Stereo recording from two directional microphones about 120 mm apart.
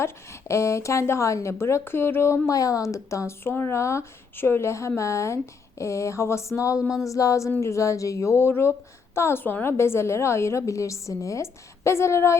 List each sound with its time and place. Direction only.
0.0 s speech: 25° left (ahead or behind)